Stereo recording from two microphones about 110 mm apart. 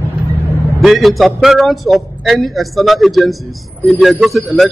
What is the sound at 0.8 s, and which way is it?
A man's voice, centre (ahead or behind).